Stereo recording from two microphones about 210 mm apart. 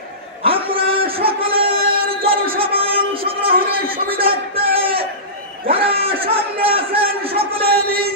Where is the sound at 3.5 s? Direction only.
45° right (ahead or behind).